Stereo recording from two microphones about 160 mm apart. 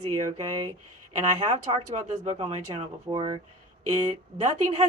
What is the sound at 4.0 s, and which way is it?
Speech, 45° right (ahead or behind).